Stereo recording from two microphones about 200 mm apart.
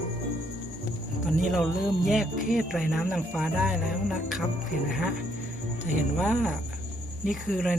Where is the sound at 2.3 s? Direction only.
40° left (ahead or behind).